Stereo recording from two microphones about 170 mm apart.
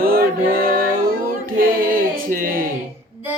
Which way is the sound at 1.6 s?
55° right (ahead or behind).